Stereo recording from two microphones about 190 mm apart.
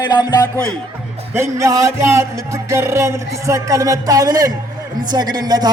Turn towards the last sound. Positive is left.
turn(degrees=-20)  # may be behind; listen again after turning